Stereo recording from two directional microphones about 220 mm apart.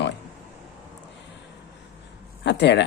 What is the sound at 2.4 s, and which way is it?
Speech, 50° left (ahead or behind).